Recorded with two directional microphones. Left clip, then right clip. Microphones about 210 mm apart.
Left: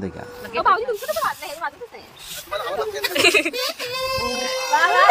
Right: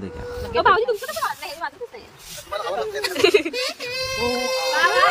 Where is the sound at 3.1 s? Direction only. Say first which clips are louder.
Left 1 dB; 5° right (ahead or behind).